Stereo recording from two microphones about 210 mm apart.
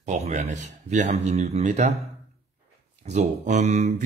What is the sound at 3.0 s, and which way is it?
Speech, 35° right (ahead or behind).